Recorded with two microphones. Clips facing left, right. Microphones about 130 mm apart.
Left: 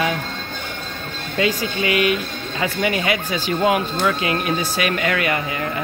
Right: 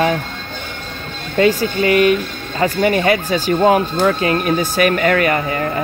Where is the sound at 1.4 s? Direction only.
45° right (ahead or behind).